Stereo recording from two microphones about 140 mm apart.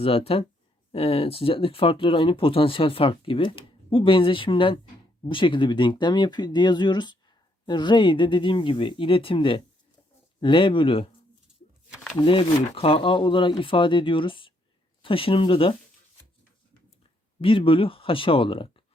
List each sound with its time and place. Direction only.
0.0 s speech: 45° left (ahead or behind)
12.2 s speech: 40° left (ahead or behind)
17.4 s speech: 40° left (ahead or behind)